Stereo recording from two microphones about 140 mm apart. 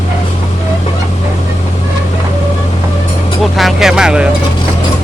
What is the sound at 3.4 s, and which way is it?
Vehicle, centre (ahead or behind).